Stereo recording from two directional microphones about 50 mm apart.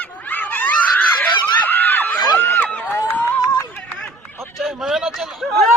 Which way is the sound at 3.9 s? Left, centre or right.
Left.